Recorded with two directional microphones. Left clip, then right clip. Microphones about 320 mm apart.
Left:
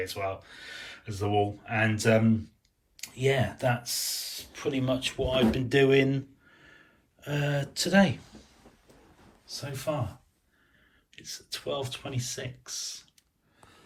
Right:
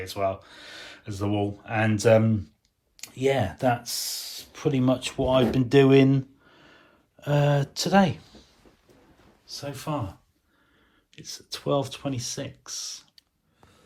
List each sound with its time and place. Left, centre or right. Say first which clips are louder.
0.0 s speech: right 5 dB; centre
9.5 s speech: right 1 dB; centre
11.1 s speech: right 2 dB; centre